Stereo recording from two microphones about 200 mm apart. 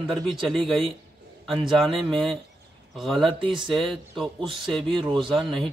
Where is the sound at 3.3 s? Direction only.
25° right (ahead or behind).